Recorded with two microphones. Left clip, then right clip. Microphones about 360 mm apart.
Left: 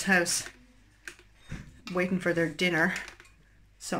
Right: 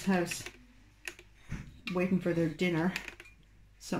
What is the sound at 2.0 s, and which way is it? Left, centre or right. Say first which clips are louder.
Speech: left 4 dB; left.